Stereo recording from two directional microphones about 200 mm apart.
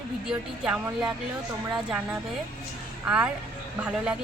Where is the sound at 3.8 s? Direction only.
5° right (ahead or behind).